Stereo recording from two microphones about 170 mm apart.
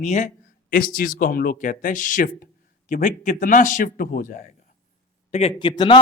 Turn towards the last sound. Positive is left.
turn(degrees=30)  # may be behind; listen again after turning